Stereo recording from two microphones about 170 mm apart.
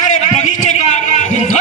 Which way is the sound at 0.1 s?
45° left (ahead or behind).